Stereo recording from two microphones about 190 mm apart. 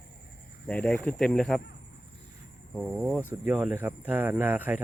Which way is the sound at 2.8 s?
Centre (ahead or behind).